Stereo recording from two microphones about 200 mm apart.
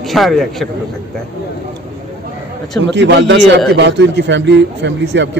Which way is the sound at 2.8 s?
60° right (ahead or behind).